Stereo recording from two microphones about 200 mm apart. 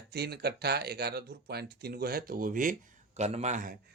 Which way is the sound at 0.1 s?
55° right (ahead or behind).